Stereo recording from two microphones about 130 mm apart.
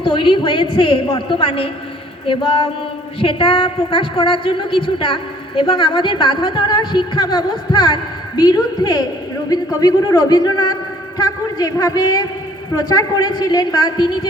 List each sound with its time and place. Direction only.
0.0 s a woman's voice: 40° left (ahead or behind)